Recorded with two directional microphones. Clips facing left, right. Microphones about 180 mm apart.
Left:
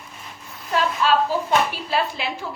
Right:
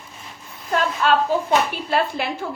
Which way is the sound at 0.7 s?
50° right (ahead or behind).